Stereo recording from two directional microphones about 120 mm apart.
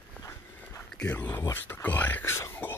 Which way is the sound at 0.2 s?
20° left (ahead or behind).